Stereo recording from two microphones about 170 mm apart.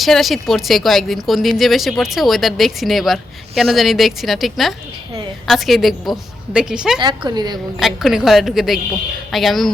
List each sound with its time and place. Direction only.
0.0 s a woman's voice: centre (ahead or behind)
7.0 s a woman's voice: 25° right (ahead or behind)
7.8 s a woman's voice: centre (ahead or behind)